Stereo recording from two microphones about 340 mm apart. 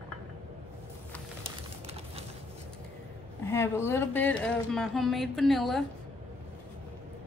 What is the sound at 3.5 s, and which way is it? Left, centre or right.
A woman's voice, centre.